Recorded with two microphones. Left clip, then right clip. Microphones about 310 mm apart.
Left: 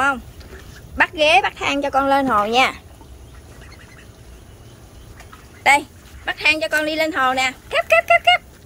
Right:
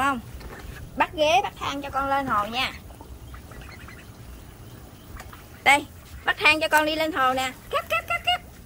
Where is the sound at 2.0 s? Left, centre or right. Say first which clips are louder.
Left 5 dB; left.